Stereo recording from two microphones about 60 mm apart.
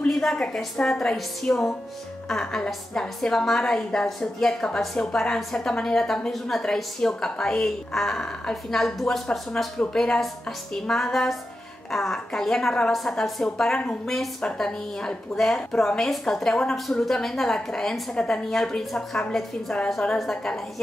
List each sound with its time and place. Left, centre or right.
0.1 s a woman's voice: centre